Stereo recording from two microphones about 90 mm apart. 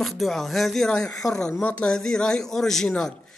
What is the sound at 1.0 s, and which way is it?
Speech, 40° left (ahead or behind).